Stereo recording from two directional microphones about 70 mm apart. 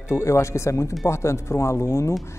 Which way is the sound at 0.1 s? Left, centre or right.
Left.